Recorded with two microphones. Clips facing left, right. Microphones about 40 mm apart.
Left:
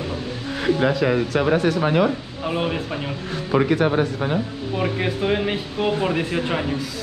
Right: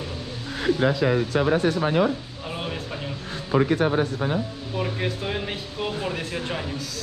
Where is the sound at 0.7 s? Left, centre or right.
Left.